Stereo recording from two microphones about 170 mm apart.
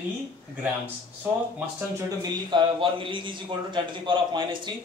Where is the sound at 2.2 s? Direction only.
30° right (ahead or behind).